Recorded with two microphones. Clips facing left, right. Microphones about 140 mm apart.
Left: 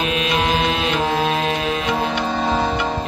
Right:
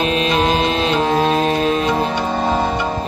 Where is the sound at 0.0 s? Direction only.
35° right (ahead or behind).